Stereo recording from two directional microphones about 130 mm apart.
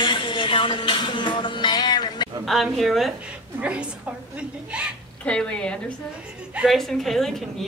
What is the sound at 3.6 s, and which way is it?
A woman's voice, 10° right (ahead or behind).